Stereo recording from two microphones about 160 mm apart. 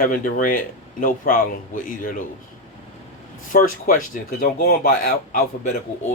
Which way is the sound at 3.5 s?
60° left (ahead or behind).